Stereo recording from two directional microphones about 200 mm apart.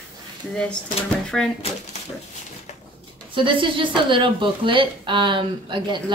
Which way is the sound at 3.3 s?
25° right (ahead or behind).